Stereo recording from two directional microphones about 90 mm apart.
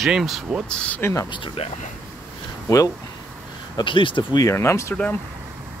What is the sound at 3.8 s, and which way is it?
Speech, 65° left (ahead or behind).